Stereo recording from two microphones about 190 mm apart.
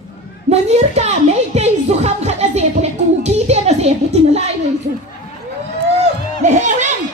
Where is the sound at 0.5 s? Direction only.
35° right (ahead or behind).